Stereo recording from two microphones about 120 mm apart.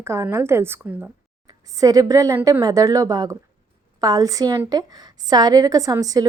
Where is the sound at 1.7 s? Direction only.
30° right (ahead or behind).